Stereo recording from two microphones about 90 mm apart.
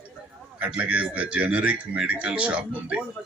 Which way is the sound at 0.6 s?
15° right (ahead or behind).